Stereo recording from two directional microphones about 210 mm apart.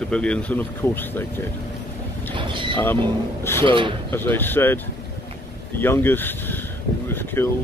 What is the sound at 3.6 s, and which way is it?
Speech, 25° right (ahead or behind).